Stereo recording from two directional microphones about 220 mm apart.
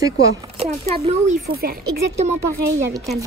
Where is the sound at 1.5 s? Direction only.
45° right (ahead or behind).